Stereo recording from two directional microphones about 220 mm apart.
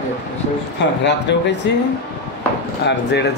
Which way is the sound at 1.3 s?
50° left (ahead or behind).